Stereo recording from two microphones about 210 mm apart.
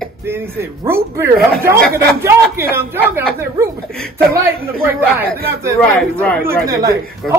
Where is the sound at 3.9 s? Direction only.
5° left (ahead or behind).